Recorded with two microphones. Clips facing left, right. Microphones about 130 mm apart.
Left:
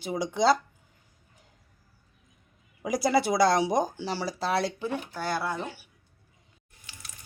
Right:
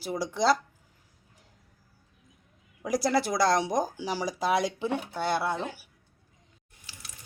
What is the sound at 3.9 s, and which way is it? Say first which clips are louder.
Speech: right 1 dB; 10° right (ahead or behind).